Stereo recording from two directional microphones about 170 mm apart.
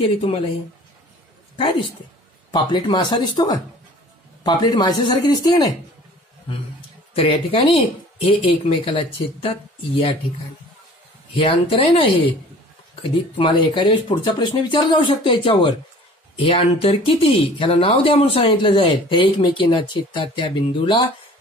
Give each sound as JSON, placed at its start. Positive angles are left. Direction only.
{"t": 0.0, "sound": "speech", "side_deg": 30}
{"t": 2.5, "sound": "speech", "side_deg": 25}
{"t": 7.2, "sound": "speech", "side_deg": 30}
{"t": 11.3, "sound": "speech", "side_deg": 30}